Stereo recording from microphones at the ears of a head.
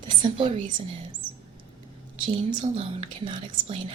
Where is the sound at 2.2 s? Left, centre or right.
Right.